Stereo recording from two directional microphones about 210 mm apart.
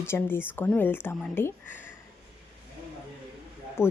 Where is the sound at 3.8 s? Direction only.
10° left (ahead or behind).